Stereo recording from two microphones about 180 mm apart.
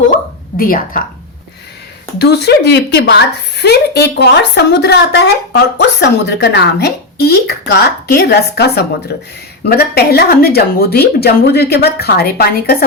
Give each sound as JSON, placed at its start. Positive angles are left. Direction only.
{"t": 0.5, "sound": "a woman's voice", "side_deg": 50}
{"t": 2.1, "sound": "a woman's voice", "side_deg": 65}